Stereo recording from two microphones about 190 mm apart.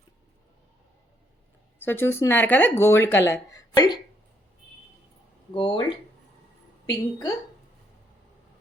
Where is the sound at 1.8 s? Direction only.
10° left (ahead or behind).